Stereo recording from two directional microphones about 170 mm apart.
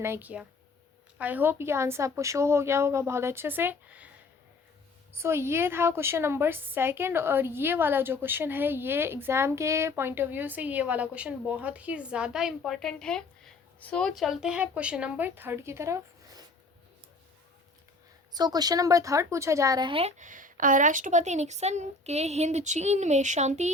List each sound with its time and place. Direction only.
0.0 s a woman's voice: 10° right (ahead or behind)
5.1 s a woman's voice: 15° right (ahead or behind)
18.3 s speech: 25° right (ahead or behind); by 23.7 s 45° right (ahead or behind)